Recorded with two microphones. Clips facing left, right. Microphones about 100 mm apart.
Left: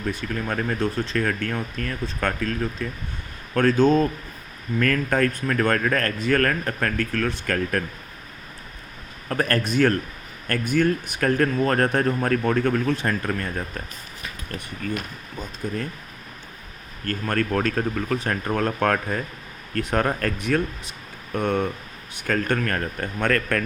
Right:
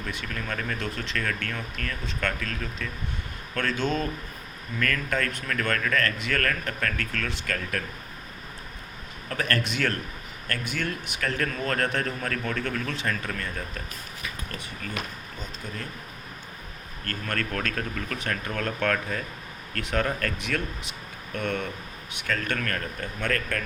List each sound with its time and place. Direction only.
0.1 s speech: 40° left (ahead or behind)
9.3 s speech: 40° left (ahead or behind)
17.1 s speech: 35° left (ahead or behind)
23.0 s speech: 55° left (ahead or behind)